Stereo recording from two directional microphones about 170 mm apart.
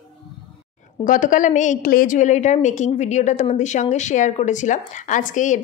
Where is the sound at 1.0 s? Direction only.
50° left (ahead or behind).